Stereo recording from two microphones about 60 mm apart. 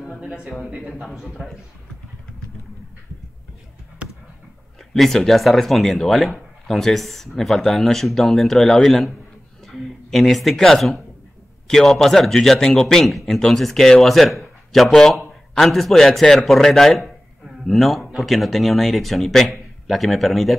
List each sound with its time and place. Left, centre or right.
0.2 s a man's voice: centre
1.0 s speech: centre
4.0 s a sound: right
4.9 s a man's voice: centre